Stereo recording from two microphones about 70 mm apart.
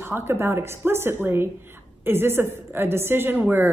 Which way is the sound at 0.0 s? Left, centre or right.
Right.